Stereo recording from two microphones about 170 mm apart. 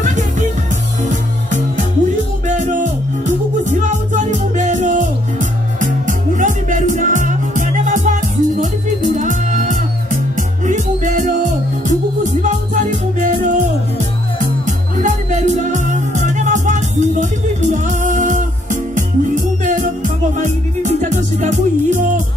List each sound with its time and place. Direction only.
2.4 s music: 45° right (ahead or behind)
4.1 s music: 45° right (ahead or behind)
15.0 s music: 45° right (ahead or behind)